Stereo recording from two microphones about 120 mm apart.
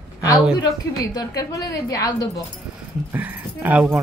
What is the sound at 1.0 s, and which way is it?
A woman's voice, 30° left (ahead or behind).